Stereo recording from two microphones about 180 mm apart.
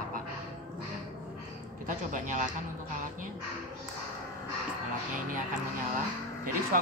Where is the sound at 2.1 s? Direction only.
45° right (ahead or behind).